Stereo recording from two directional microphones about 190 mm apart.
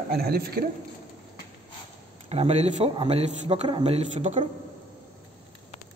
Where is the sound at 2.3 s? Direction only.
35° right (ahead or behind).